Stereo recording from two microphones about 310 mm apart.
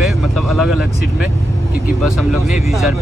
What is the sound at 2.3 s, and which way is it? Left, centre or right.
Speech, centre.